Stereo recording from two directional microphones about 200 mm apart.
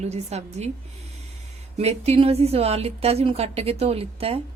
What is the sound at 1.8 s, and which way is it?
A woman's voice, 30° right (ahead or behind).